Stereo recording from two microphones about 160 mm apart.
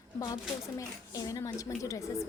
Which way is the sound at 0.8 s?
20° left (ahead or behind).